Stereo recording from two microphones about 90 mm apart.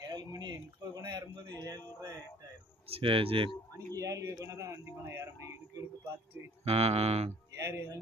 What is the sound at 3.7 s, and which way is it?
Speech, 35° right (ahead or behind).